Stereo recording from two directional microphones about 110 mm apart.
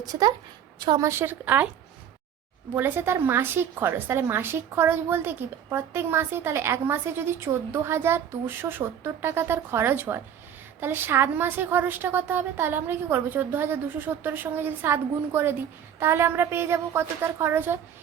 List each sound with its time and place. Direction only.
0.0 s a woman's voice: 35° right (ahead or behind)
1.0 s a woman's voice: 20° right (ahead or behind)
2.7 s a woman's voice: 20° right (ahead or behind)